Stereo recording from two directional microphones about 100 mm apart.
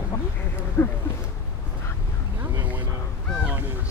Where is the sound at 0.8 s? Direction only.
25° left (ahead or behind).